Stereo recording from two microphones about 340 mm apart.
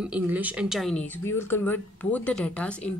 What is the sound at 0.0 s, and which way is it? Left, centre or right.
A woman's voice, centre.